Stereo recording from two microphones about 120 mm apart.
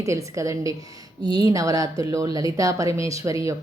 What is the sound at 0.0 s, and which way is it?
A woman's voice, 25° right (ahead or behind).